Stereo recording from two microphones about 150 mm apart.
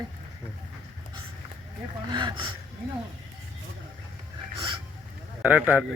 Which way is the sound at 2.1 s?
30° right (ahead or behind).